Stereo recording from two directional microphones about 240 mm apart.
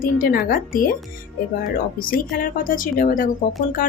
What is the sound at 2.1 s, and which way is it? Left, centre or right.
Speech, left.